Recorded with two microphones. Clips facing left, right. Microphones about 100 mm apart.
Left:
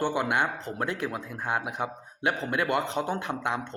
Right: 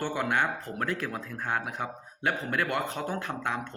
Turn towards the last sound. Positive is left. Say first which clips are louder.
# left 2 dB
turn(degrees=20)  # may be behind; listen again after turning